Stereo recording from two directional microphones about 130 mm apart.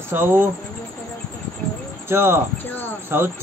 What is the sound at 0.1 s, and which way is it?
Speech, 15° right (ahead or behind).